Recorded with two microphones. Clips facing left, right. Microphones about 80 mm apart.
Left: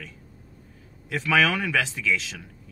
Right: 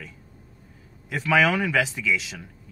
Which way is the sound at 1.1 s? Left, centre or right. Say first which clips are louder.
Right 1 dB; centre.